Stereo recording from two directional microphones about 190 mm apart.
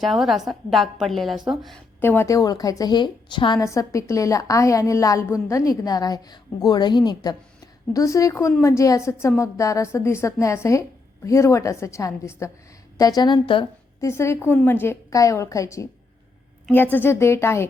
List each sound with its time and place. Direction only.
0.0 s a woman's voice: centre (ahead or behind)
2.0 s a woman's voice: 10° left (ahead or behind)
14.1 s a woman's voice: 15° left (ahead or behind)